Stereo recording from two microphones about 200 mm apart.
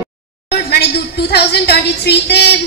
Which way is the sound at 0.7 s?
55° left (ahead or behind).